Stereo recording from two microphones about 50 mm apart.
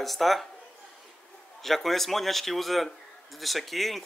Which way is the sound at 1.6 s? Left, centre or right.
Centre.